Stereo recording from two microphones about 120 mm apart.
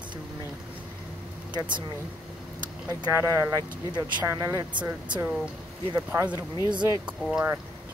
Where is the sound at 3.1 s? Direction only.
25° right (ahead or behind).